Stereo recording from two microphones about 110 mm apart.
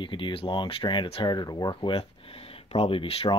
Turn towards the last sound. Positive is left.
turn(degrees=55)  # may be behind; listen again after turning